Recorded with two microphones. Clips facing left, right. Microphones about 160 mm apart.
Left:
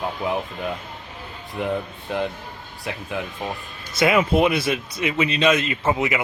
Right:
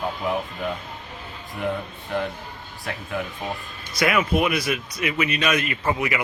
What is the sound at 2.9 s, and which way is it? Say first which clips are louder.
Speech: even; 15° left (ahead or behind).